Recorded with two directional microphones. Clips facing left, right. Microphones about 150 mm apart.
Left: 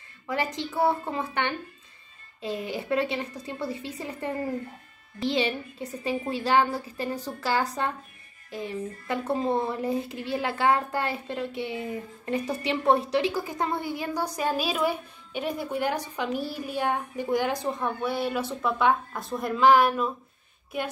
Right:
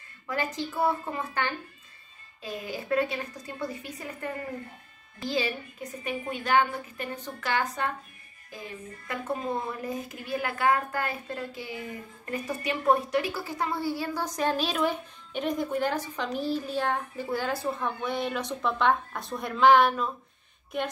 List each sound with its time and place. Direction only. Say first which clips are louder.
0.3 s a woman's voice: left 2 dB; 20° left (ahead or behind); by 20.9 s 5° left (ahead or behind)